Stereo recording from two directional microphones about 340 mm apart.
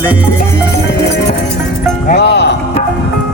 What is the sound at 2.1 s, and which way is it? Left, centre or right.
Speech, left.